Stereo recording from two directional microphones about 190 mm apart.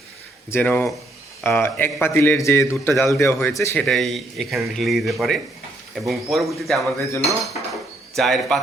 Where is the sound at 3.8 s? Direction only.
Centre (ahead or behind).